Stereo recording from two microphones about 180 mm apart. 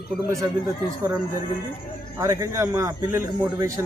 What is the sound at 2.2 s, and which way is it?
Speech, 15° right (ahead or behind).